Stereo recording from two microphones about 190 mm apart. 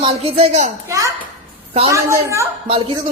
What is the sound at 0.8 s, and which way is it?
A woman's voice, 15° right (ahead or behind).